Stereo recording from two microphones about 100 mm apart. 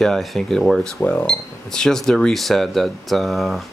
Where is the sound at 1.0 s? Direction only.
15° left (ahead or behind).